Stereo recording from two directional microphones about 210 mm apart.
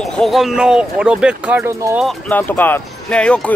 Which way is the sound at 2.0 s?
Centre (ahead or behind).